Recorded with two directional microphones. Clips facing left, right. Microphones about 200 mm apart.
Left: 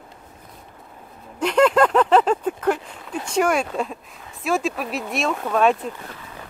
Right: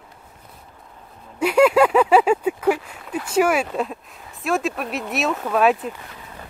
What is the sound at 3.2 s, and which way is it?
Speech, 5° right (ahead or behind).